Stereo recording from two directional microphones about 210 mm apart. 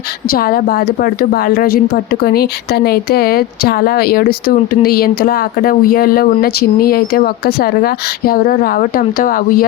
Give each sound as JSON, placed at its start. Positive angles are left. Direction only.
{"t": 0.3, "sound": "a woman's voice", "side_deg": 45}